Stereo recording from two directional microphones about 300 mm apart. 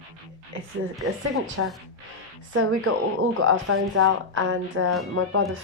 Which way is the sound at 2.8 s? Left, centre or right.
Right.